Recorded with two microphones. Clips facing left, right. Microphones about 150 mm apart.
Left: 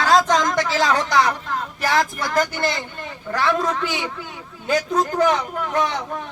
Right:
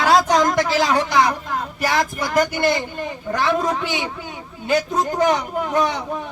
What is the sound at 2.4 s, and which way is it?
Speech, 15° right (ahead or behind).